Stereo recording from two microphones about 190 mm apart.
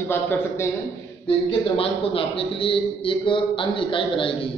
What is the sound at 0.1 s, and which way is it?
Speech, 10° left (ahead or behind).